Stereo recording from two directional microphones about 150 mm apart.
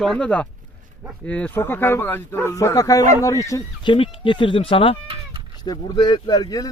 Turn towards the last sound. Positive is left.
turn(degrees=25)  # may be behind; listen again after turning